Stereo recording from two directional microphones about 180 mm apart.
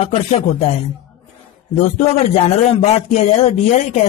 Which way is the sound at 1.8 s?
35° left (ahead or behind).